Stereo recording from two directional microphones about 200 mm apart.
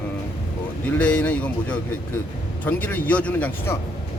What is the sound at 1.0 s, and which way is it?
Speech, 5° left (ahead or behind).